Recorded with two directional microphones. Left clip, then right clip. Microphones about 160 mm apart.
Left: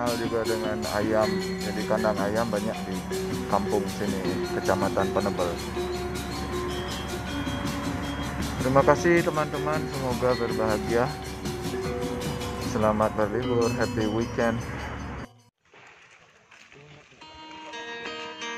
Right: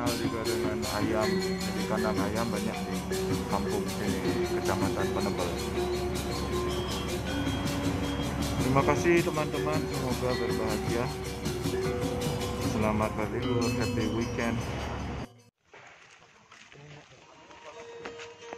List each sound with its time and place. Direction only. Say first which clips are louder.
0.0 s speech: left 4 dB; centre (ahead or behind)
8.8 s speech: left 5 dB; 25° left (ahead or behind)
9.1 s speech: left 3 dB; centre (ahead or behind)
11.1 s music: left 1 dB; centre (ahead or behind)
12.8 s speech: left 8 dB; 20° left (ahead or behind)
13.4 s speech: left 3 dB; centre (ahead or behind)